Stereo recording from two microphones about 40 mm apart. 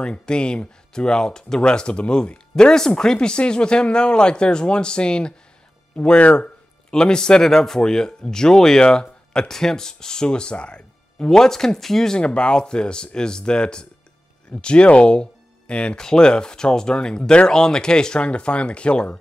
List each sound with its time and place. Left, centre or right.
0.0 s speech: left
11.2 s speech: centre
12.2 s speech: left
16.0 s speech: centre